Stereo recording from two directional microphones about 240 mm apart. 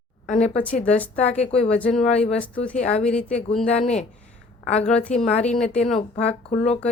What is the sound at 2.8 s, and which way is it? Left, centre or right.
Speech, left.